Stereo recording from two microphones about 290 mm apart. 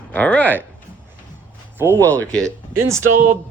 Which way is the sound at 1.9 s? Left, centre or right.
Centre.